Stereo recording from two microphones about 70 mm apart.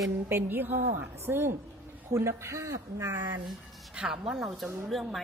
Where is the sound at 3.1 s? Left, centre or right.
Right.